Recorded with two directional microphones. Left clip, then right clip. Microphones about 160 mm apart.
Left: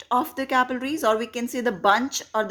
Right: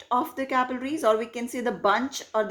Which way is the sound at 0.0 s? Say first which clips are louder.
Left 2 dB; 30° left (ahead or behind).